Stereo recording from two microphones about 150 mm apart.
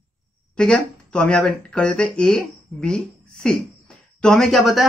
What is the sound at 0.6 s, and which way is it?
Speech, 5° left (ahead or behind).